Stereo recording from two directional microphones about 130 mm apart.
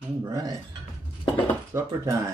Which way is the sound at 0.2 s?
25° right (ahead or behind).